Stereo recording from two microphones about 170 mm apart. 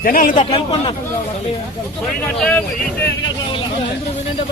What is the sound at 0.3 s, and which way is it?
Speech, 30° left (ahead or behind).